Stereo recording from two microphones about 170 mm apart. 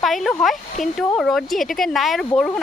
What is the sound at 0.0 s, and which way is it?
Speech, centre (ahead or behind).